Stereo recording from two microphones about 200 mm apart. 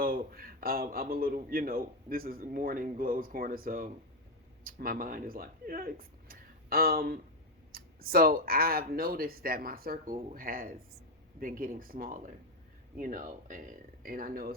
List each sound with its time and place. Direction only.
0.0 s a man's voice: 45° right (ahead or behind)